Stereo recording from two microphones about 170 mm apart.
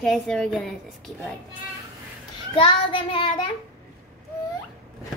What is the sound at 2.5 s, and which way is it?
Child singing, 30° left (ahead or behind).